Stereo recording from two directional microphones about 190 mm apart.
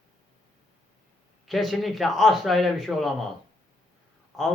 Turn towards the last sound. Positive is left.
turn(degrees=0)  # may be behind; listen again after turning